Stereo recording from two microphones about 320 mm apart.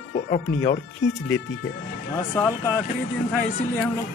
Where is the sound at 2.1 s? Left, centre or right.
Centre.